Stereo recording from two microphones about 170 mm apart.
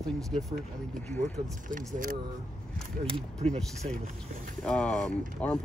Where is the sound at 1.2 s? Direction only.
50° right (ahead or behind).